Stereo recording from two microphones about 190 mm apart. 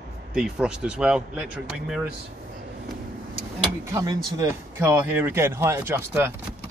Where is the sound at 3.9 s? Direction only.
20° right (ahead or behind).